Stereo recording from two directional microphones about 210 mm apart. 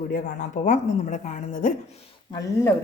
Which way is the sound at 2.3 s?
15° left (ahead or behind).